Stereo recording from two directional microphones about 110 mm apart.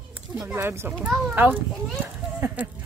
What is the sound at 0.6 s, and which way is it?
A child's voice, 20° right (ahead or behind).